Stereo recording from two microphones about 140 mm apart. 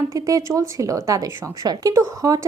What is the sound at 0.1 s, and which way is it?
A woman's voice, 25° right (ahead or behind).